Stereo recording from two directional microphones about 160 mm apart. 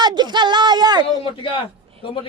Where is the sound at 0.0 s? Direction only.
25° right (ahead or behind).